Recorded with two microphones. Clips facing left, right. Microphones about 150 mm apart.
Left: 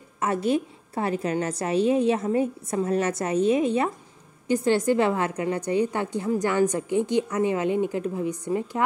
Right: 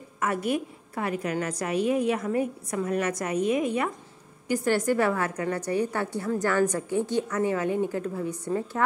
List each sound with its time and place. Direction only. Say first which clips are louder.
0.2 s a woman's voice: left 3 dB; 25° left (ahead or behind)